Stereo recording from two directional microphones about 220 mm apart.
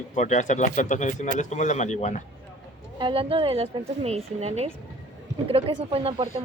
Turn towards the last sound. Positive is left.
turn(degrees=-25)  # may be behind; listen again after turning